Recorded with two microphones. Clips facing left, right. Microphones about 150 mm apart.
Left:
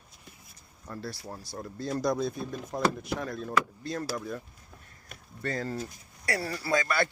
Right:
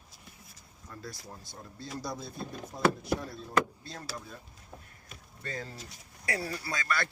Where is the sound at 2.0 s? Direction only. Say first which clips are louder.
Left 10 dB; 90° left; by 4.4 s 70° left (ahead or behind).